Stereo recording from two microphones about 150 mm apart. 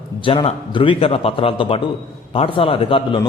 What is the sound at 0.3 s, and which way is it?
A man's voice, 35° left (ahead or behind).